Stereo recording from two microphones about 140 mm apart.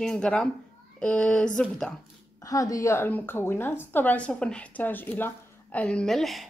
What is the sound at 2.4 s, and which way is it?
A woman's voice, 25° left (ahead or behind).